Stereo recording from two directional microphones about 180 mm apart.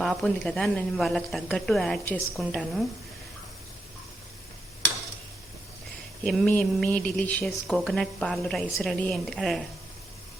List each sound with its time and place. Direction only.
0.0 s speech: 5° left (ahead or behind)
6.2 s speech: 5° left (ahead or behind)